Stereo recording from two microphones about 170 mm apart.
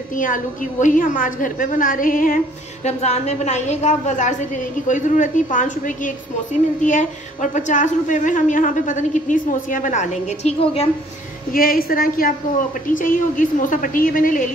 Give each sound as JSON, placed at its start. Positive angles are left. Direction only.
{"t": 0.1, "sound": "a woman's voice", "side_deg": 50}
{"t": 11.5, "sound": "a woman's voice", "side_deg": 60}